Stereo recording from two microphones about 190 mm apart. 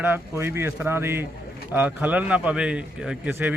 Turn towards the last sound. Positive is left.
turn(degrees=-10)  # may be behind; listen again after turning